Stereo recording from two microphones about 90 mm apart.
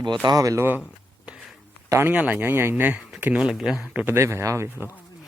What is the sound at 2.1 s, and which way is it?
Speech, 15° right (ahead or behind).